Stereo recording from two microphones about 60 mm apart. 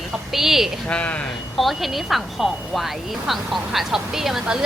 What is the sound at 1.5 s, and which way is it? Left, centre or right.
Speech, centre.